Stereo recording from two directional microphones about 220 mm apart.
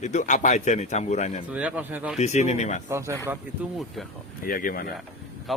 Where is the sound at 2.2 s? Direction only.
30° left (ahead or behind).